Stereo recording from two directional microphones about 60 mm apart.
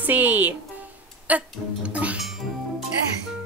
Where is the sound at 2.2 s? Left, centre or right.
Centre.